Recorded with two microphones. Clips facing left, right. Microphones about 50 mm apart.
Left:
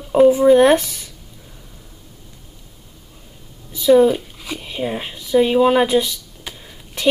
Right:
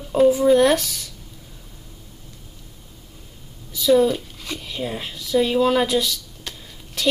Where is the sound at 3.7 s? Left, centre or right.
Left.